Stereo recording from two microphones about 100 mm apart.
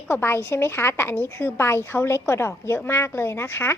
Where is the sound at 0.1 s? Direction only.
25° left (ahead or behind).